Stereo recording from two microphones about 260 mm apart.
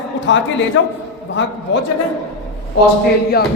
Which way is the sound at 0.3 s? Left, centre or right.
Left.